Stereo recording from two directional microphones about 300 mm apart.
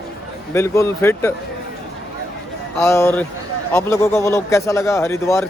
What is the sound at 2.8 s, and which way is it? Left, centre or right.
A man's voice, centre.